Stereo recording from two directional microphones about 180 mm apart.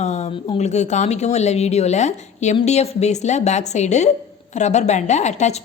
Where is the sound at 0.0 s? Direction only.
40° left (ahead or behind).